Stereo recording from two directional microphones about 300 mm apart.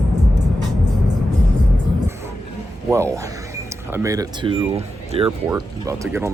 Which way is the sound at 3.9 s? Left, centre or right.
Centre.